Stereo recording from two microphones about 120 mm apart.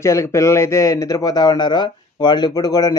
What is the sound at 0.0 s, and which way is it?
A man's voice, 25° left (ahead or behind).